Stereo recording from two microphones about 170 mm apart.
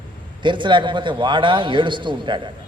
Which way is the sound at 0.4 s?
30° right (ahead or behind).